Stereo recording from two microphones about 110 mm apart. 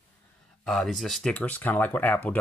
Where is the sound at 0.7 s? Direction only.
Centre (ahead or behind).